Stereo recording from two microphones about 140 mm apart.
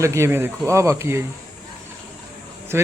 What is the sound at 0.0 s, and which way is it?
Speech, 20° right (ahead or behind).